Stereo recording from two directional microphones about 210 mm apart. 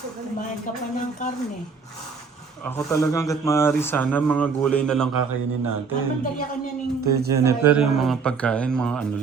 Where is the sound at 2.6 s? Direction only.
10° left (ahead or behind).